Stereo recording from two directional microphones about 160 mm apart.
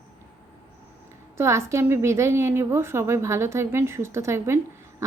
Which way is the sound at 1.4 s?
15° right (ahead or behind).